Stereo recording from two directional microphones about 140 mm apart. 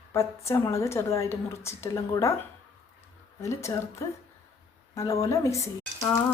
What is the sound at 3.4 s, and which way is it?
A woman's voice, 20° left (ahead or behind).